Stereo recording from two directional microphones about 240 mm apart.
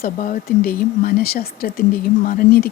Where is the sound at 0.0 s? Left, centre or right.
Left.